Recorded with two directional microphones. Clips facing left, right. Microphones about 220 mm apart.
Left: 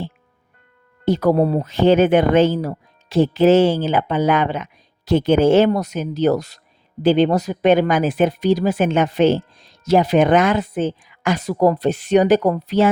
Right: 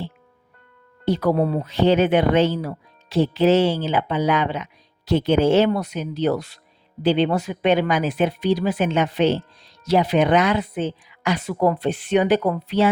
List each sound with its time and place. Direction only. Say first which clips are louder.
1.0 s speech: left 4 dB; 45° left (ahead or behind)